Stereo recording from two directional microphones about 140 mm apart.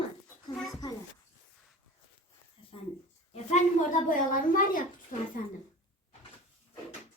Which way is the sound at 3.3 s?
60° left (ahead or behind).